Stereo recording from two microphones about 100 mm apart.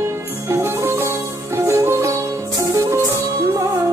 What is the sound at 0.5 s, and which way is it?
Music, 25° right (ahead or behind).